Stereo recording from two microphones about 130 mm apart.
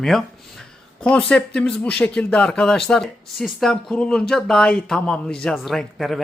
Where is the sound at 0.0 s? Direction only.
5° left (ahead or behind).